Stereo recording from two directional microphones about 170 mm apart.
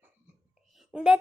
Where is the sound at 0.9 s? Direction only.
5° right (ahead or behind).